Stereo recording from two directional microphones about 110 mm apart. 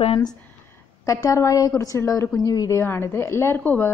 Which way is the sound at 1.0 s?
30° left (ahead or behind).